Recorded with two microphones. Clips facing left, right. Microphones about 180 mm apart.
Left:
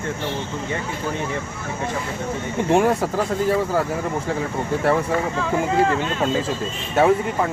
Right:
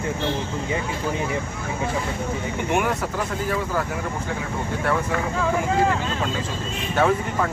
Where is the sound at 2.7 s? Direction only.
30° left (ahead or behind).